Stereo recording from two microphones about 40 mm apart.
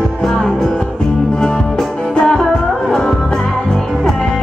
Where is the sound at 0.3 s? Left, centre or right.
Centre.